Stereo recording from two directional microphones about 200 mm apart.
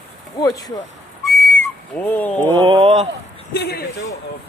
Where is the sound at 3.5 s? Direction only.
55° left (ahead or behind).